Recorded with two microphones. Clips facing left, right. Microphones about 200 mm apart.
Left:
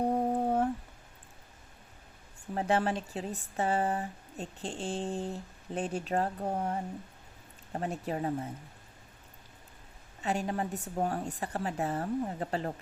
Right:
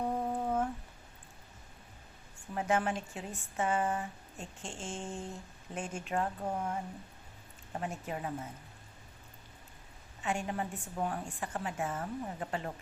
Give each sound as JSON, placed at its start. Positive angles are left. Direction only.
{"t": 0.0, "sound": "humming", "side_deg": 35}
{"t": 2.6, "sound": "speech", "side_deg": 35}
{"t": 10.2, "sound": "speech", "side_deg": 35}